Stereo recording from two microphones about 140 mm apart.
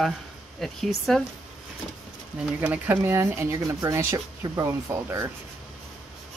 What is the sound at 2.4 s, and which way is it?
Speech, 10° right (ahead or behind).